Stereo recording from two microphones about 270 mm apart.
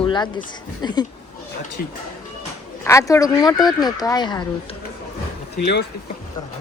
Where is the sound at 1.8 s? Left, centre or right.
Left.